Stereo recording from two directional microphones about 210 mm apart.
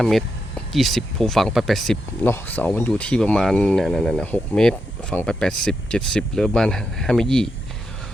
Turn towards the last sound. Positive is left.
turn(degrees=0)  # may be behind; listen again after turning